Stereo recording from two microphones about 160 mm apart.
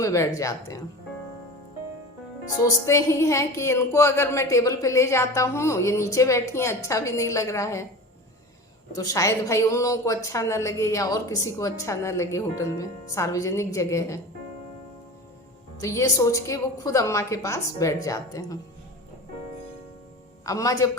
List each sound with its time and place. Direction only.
0.0 s a woman's voice: 20° left (ahead or behind)
2.6 s a woman's voice: 20° left (ahead or behind)
8.9 s a woman's voice: 20° left (ahead or behind)
15.8 s a woman's voice: 20° left (ahead or behind)
20.4 s a woman's voice: 20° left (ahead or behind)